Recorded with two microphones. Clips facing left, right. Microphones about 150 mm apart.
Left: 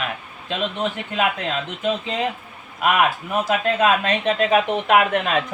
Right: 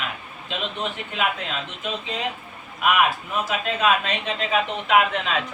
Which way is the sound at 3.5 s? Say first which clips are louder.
Left 4 dB; 50° left (ahead or behind).